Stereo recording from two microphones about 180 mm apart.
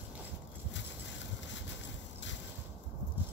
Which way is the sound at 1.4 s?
85° left.